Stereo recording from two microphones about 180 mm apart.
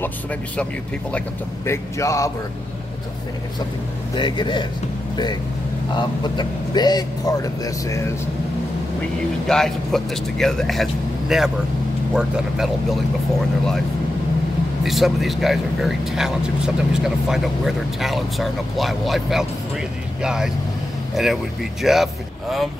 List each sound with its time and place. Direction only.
1.7 s speech: 15° left (ahead or behind)
4.1 s speech: 25° left (ahead or behind)
9.5 s speech: centre (ahead or behind)
14.9 s speech: centre (ahead or behind)